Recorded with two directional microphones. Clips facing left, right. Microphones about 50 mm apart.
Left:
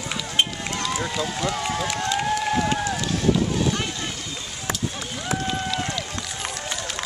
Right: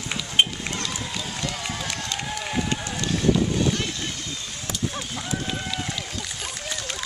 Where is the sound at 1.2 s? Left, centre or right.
Centre.